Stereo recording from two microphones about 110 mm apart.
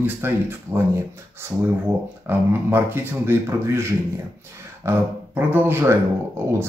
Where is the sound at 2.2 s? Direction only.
20° right (ahead or behind).